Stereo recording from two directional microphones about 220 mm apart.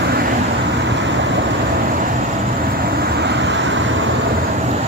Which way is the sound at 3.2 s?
50° right (ahead or behind).